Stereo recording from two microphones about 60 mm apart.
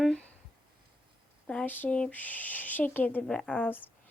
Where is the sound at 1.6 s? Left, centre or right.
Left.